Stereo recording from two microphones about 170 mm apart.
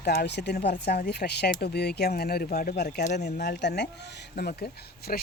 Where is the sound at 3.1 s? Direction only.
80° left.